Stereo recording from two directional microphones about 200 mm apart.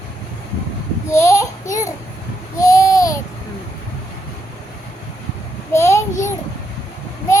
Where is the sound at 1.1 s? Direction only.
15° left (ahead or behind).